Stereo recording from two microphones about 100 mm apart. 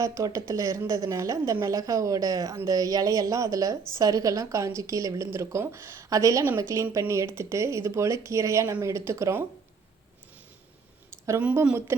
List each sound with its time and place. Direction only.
0.0 s a woman's voice: 35° right (ahead or behind)
11.3 s speech: 15° right (ahead or behind)